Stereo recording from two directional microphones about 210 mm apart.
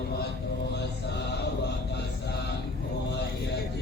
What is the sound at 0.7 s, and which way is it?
Mantra, 55° left (ahead or behind).